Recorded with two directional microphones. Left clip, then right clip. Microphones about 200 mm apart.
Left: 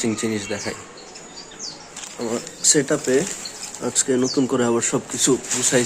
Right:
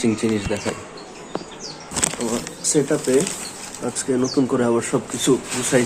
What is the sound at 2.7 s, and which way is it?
Speech, 25° left (ahead or behind).